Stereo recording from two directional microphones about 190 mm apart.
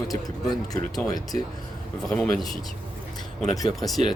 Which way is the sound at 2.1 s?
5° left (ahead or behind).